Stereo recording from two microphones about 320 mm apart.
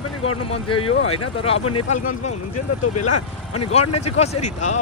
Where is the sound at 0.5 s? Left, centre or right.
Centre.